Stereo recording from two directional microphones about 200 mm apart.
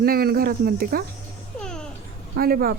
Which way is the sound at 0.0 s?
50° right (ahead or behind).